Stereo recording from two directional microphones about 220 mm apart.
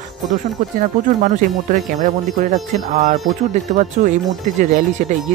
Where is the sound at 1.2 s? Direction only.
35° right (ahead or behind).